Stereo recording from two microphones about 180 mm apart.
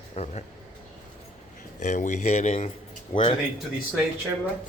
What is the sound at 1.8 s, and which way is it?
Speech, 40° left (ahead or behind).